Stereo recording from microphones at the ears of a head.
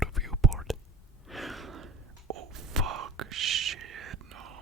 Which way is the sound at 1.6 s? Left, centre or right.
Right.